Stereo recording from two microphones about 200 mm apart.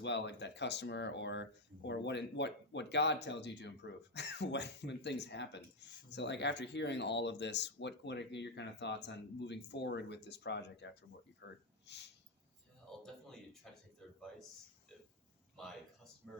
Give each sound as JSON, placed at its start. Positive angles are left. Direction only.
{"t": 0.0, "sound": "speech", "side_deg": 60}
{"t": 12.9, "sound": "a sound", "side_deg": 0}
{"t": 16.2, "sound": "speech", "side_deg": 5}